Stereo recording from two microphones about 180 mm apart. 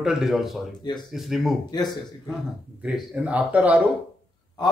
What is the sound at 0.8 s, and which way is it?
Speech, 25° left (ahead or behind).